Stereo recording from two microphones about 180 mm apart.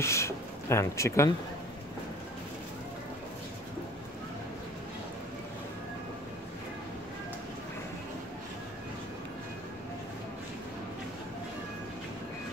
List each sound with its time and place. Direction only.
0.0 s speech: 15° left (ahead or behind)